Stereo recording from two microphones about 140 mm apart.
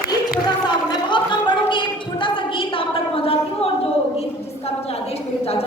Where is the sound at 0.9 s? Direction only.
35° left (ahead or behind).